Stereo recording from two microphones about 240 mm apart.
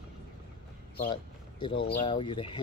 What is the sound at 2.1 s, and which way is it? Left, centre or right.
Speech, left.